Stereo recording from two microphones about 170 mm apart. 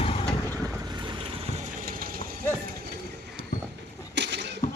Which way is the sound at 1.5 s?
55° right (ahead or behind).